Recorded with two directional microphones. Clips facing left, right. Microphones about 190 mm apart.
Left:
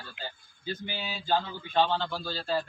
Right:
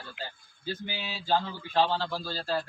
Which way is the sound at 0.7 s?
5° right (ahead or behind).